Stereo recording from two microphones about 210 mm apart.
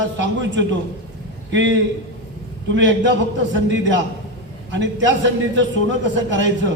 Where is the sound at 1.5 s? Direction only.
60° right (ahead or behind).